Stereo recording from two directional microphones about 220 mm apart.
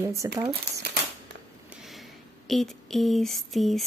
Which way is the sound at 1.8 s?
Centre (ahead or behind).